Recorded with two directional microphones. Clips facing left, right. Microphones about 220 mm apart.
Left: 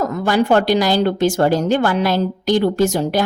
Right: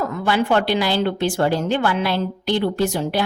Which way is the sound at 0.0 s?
40° left (ahead or behind).